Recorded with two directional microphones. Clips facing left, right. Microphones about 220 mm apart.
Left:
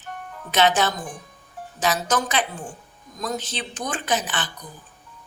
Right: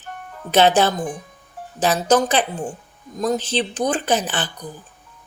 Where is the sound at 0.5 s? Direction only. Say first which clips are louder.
Right 5 dB; 35° right (ahead or behind).